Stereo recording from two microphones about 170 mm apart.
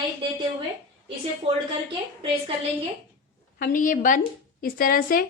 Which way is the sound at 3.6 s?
55° left (ahead or behind).